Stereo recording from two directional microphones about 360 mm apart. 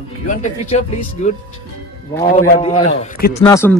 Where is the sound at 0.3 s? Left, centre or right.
Centre.